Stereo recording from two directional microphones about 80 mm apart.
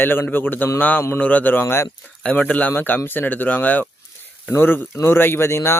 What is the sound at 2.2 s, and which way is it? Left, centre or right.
Speech, centre.